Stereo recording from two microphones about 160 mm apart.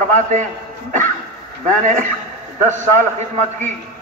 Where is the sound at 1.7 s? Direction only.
55° right (ahead or behind).